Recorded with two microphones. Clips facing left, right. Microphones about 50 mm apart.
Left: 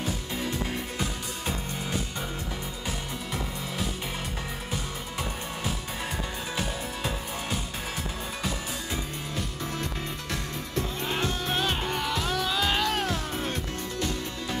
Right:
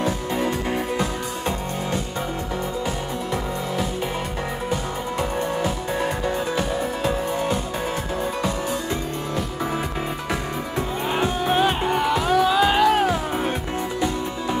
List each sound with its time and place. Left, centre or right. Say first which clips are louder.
0.4 s music: right 7 dB; right
6.5 s music: right 8 dB; centre
11.1 s music: right 10 dB; centre